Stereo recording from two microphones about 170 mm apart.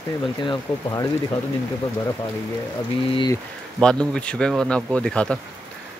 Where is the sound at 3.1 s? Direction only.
25° left (ahead or behind).